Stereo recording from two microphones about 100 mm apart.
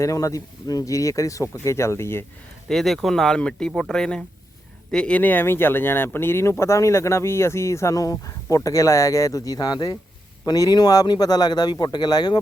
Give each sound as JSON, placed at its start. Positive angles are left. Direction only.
{"t": 0.0, "sound": "speech", "side_deg": 35}
{"t": 2.6, "sound": "speech", "side_deg": 0}